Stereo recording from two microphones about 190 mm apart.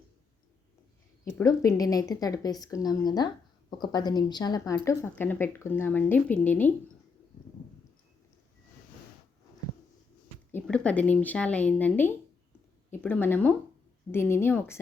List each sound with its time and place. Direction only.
1.5 s a woman's voice: 20° left (ahead or behind)
10.5 s a woman's voice: 5° left (ahead or behind)